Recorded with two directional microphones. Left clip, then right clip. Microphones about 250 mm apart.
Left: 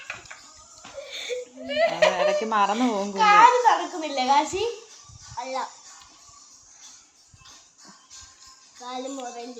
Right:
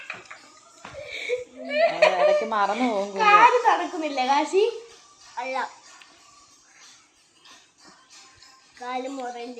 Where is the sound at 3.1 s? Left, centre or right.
Centre.